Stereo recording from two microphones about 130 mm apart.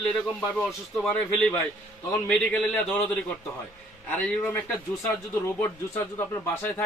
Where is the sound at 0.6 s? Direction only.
10° left (ahead or behind).